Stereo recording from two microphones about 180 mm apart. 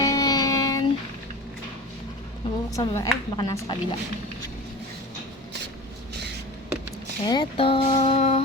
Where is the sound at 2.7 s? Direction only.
20° left (ahead or behind).